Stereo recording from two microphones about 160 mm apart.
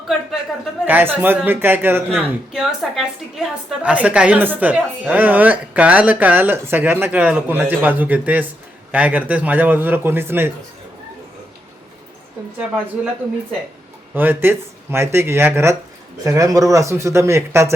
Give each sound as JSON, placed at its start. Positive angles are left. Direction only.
{"t": 0.1, "sound": "speech", "side_deg": 0}
{"t": 0.9, "sound": "a woman's voice", "side_deg": -10}
{"t": 2.5, "sound": "a woman's voice", "side_deg": 0}
{"t": 13.0, "sound": "a woman's voice", "side_deg": -10}